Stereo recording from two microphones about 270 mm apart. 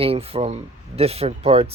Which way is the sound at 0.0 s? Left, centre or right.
Right.